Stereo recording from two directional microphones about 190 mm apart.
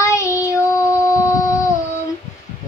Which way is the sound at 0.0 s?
15° left (ahead or behind).